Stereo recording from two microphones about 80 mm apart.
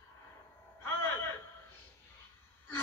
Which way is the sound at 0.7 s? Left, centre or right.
Left.